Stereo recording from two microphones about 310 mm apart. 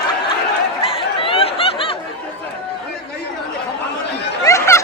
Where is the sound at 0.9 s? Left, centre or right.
Centre.